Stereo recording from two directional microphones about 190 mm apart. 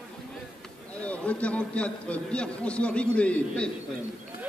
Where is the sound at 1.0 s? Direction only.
5° left (ahead or behind).